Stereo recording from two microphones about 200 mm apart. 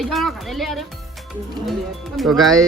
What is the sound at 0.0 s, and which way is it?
Speech, centre (ahead or behind).